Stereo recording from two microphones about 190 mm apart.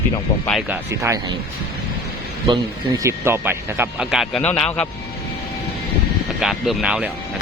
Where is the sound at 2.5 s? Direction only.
20° right (ahead or behind); by 4.9 s 5° left (ahead or behind).